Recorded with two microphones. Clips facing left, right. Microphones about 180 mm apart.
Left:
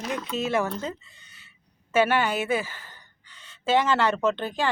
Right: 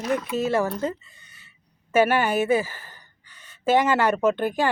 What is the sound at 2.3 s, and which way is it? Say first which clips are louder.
Speech: right 5 dB; 45° right (ahead or behind).